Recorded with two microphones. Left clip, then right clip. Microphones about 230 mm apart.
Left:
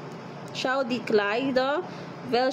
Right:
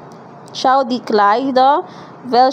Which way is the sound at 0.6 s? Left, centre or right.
Right.